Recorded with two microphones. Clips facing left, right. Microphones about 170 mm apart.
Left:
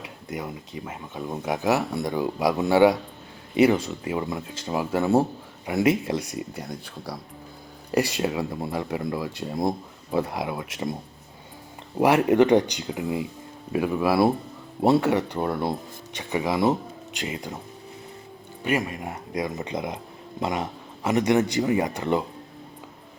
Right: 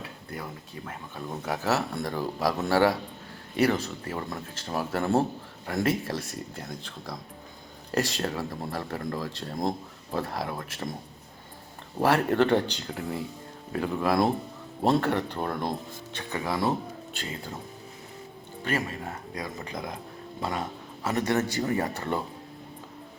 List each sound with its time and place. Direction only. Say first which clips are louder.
0.0 s speech: left 5 dB; 15° left (ahead or behind)
11.9 s speech: left 5 dB; 15° left (ahead or behind)
18.6 s speech: left 4 dB; 15° left (ahead or behind)